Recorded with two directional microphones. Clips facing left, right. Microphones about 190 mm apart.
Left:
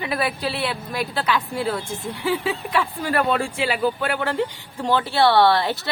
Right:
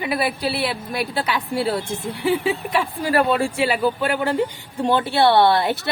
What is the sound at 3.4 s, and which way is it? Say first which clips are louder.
Speech: right 4 dB; 35° right (ahead or behind).